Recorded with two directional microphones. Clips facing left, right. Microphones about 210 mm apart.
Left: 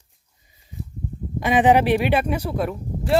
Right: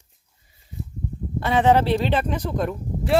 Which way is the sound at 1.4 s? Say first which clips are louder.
Left 2 dB; 15° left (ahead or behind).